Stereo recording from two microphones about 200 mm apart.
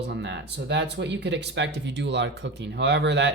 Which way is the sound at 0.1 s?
60° right (ahead or behind).